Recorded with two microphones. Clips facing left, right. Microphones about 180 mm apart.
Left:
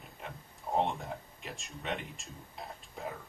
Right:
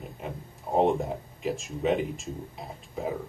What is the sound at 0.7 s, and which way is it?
Speech, 15° right (ahead or behind).